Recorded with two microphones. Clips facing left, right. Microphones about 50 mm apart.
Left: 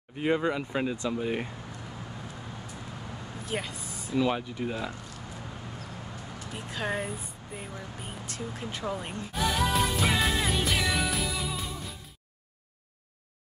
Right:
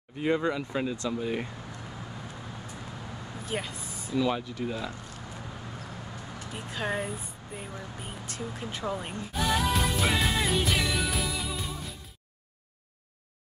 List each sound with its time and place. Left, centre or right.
0.2 s speech: centre
3.4 s speech: centre
4.1 s speech: centre
6.5 s speech: centre
8.3 s music: centre